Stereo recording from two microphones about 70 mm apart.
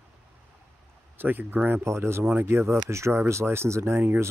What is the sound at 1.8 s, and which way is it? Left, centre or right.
Speech, right.